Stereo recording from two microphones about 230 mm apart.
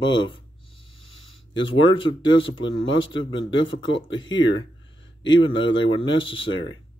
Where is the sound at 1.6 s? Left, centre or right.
Left.